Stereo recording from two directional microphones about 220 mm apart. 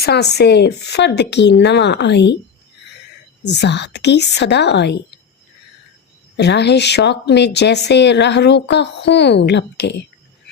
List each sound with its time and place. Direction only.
0.0 s speech: 50° left (ahead or behind)
3.4 s speech: 50° left (ahead or behind)
6.3 s speech: 50° left (ahead or behind)